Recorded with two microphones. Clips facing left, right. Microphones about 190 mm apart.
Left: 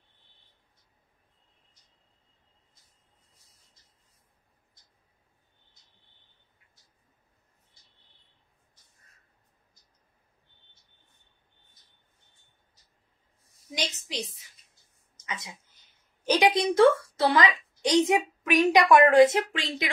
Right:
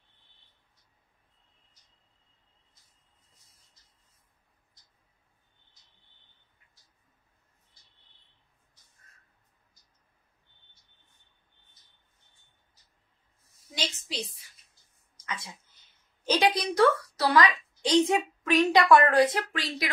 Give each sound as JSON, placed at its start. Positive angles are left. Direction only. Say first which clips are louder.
{"t": 13.7, "sound": "a woman's voice", "louder": "left 2 dB", "side_deg": 20}
{"t": 15.2, "sound": "a woman's voice", "louder": "even", "side_deg": 20}